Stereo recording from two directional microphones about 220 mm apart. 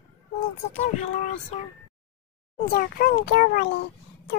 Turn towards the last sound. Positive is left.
turn(degrees=50)  # may be behind; listen again after turning